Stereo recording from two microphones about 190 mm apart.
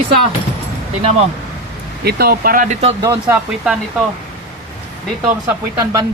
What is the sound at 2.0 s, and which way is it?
Speech, 55° right (ahead or behind).